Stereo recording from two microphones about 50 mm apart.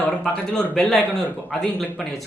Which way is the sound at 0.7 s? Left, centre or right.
Centre.